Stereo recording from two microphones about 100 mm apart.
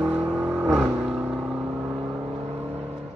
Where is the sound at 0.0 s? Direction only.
15° right (ahead or behind).